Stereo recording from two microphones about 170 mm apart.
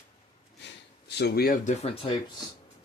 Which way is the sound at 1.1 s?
70° left (ahead or behind).